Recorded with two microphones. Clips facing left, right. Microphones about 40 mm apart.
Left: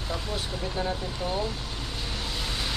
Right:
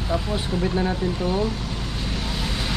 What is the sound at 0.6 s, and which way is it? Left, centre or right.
Speech, right.